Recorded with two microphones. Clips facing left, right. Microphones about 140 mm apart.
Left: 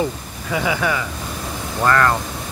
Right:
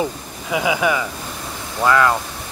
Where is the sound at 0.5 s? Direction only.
15° right (ahead or behind).